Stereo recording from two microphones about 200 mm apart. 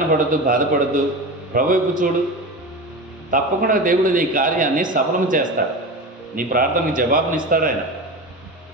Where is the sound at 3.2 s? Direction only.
45° right (ahead or behind).